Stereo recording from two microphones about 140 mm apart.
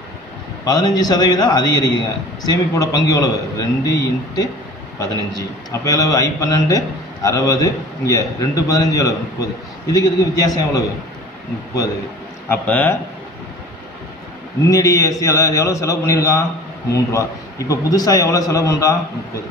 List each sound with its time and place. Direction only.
0.7 s a man's voice: 30° left (ahead or behind)
12.4 s speech: 10° left (ahead or behind)
14.7 s a man's voice: 25° left (ahead or behind)